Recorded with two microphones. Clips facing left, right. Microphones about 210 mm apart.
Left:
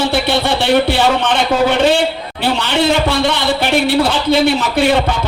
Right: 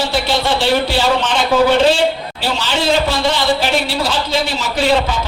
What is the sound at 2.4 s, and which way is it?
A man's voice, 60° left (ahead or behind).